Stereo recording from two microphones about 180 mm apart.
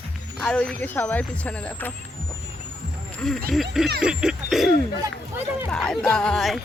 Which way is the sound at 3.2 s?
5° left (ahead or behind).